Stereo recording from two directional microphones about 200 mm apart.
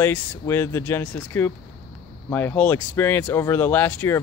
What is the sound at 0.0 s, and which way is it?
Speech, 10° left (ahead or behind).